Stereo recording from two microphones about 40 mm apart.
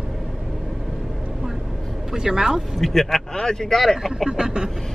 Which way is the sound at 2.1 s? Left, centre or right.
Centre.